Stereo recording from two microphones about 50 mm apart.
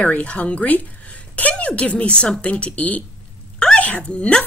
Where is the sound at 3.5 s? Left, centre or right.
Left.